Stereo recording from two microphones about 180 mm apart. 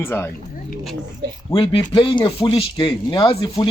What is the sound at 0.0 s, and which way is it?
Speech, 15° left (ahead or behind).